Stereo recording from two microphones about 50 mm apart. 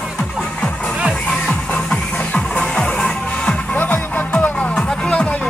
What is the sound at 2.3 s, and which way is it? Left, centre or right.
Music, centre.